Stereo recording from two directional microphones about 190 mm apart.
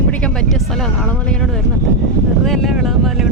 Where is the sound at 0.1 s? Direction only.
5° left (ahead or behind).